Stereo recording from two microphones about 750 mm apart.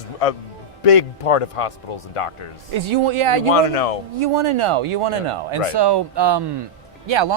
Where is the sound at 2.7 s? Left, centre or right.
Right.